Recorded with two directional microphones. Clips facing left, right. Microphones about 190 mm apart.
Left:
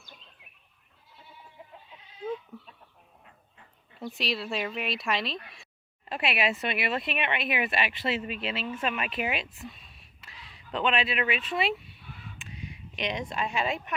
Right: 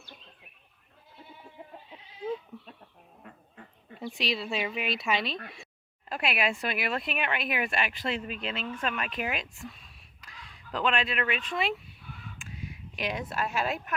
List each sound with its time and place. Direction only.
1.6 s goat: 40° right (ahead or behind)
4.0 s speech: centre (ahead or behind)
12.4 s a sound: centre (ahead or behind)